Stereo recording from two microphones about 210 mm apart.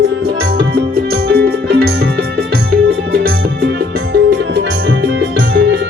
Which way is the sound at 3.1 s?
45° right (ahead or behind).